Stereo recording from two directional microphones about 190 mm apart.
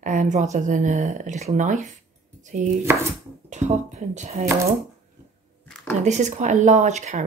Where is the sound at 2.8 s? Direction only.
15° right (ahead or behind).